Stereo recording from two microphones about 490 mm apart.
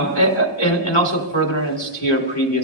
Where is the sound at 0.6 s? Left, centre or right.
Left.